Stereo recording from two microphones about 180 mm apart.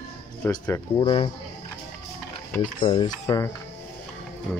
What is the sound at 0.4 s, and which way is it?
Speech, 15° left (ahead or behind).